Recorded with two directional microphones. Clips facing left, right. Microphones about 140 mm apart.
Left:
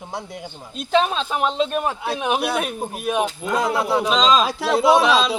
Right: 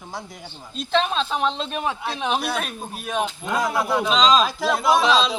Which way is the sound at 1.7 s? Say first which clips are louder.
Left 3 dB; 50° left (ahead or behind).